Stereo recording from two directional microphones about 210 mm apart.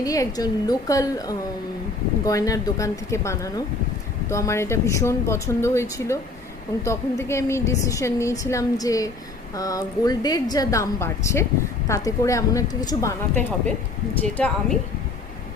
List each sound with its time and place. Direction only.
0.0 s a woman's voice: 15° left (ahead or behind)